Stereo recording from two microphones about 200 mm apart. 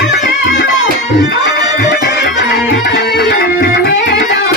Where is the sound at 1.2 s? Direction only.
50° left (ahead or behind).